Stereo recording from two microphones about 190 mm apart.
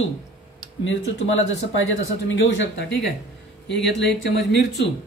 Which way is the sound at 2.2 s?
80° left.